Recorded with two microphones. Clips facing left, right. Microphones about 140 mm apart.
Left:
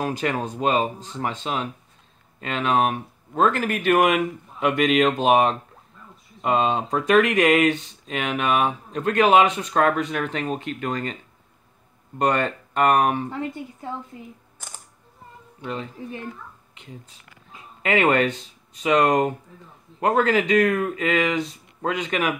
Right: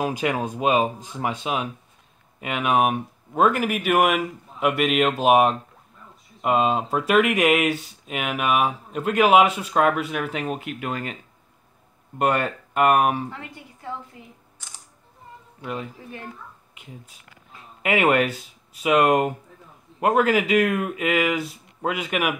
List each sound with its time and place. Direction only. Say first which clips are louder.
0.0 s speech: right 1 dB; 10° right (ahead or behind)
12.2 s speech: even; 5° right (ahead or behind)
14.6 s camera: left 5 dB; 50° left (ahead or behind)
15.6 s speech: left 1 dB; 10° right (ahead or behind)